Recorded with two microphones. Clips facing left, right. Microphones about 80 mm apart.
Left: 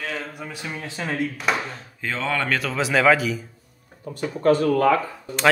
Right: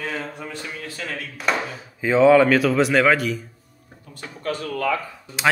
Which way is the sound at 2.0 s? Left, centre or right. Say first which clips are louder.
Right 12 dB; centre.